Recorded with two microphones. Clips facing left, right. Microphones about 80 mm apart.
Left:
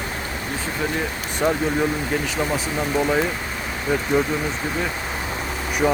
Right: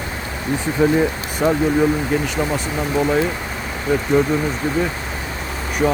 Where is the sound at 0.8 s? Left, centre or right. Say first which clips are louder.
Right 11 dB; right.